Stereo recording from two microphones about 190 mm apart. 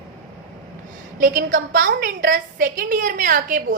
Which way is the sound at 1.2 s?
50° right (ahead or behind).